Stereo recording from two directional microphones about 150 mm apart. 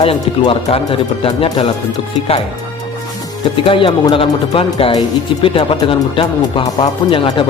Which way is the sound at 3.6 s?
35° left (ahead or behind).